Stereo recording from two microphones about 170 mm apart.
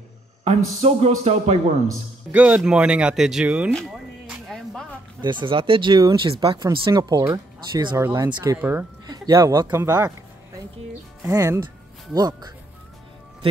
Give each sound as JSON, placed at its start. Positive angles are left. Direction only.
{"t": 0.4, "sound": "speech", "side_deg": -40}
{"t": 2.3, "sound": "speech", "side_deg": -10}
{"t": 3.7, "sound": "a sound", "side_deg": 0}
{"t": 5.2, "sound": "speech", "side_deg": -30}
{"t": 8.5, "sound": "speech", "side_deg": -10}
{"t": 9.0, "sound": "speech", "side_deg": -25}
{"t": 11.2, "sound": "speech", "side_deg": -20}